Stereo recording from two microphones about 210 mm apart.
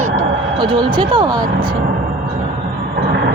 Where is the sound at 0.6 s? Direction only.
20° right (ahead or behind).